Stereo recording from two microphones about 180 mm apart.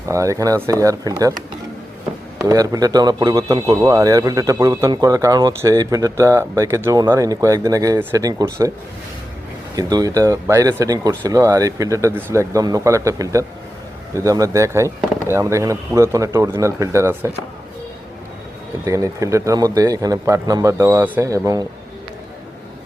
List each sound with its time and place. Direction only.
0.0 s a man's voice: 15° right (ahead or behind)
2.5 s a man's voice: 20° right (ahead or behind)
9.7 s speech: 20° right (ahead or behind)
18.9 s speech: 15° right (ahead or behind)